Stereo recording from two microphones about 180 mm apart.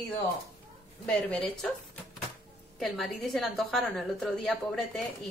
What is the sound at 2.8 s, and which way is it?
A woman's voice, centre (ahead or behind).